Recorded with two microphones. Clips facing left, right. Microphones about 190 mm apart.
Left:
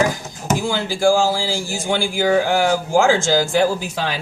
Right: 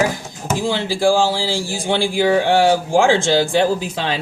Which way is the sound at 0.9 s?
30° right (ahead or behind).